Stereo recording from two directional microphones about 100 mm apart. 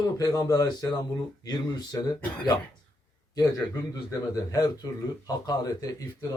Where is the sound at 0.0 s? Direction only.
35° left (ahead or behind).